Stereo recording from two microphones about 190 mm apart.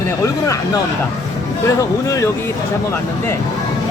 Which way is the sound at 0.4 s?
15° left (ahead or behind).